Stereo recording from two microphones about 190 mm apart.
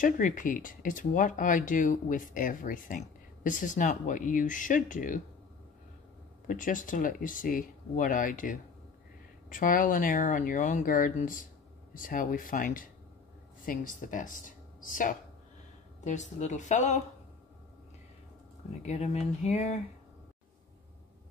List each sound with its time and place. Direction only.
0.0 s speech: 45° left (ahead or behind)
6.4 s a woman's voice: 45° left (ahead or behind)
18.8 s a woman's voice: 35° left (ahead or behind)